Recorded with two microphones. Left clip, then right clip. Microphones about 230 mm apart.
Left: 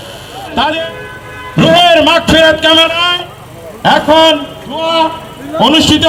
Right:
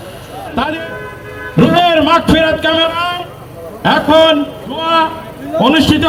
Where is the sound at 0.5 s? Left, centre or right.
Left.